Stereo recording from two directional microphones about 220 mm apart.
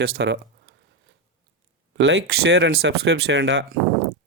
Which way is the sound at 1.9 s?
55° right (ahead or behind).